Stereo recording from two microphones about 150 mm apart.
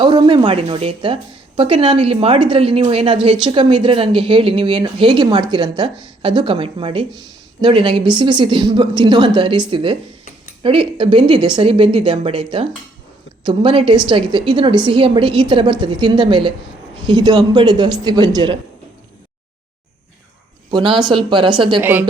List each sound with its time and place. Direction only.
0.0 s a man's voice: 30° right (ahead or behind)
20.7 s speech: 30° right (ahead or behind)
21.8 s a woman's voice: 15° right (ahead or behind)